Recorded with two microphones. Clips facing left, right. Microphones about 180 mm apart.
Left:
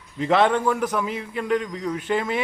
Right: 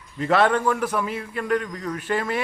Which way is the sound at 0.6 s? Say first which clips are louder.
Even; 10° left (ahead or behind).